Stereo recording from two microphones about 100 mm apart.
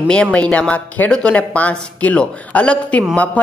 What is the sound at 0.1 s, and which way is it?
A man's voice, 10° left (ahead or behind).